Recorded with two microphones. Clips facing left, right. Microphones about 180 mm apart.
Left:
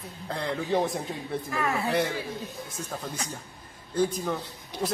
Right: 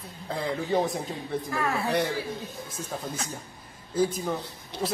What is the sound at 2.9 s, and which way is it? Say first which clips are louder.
Speech: right 1 dB; 5° right (ahead or behind).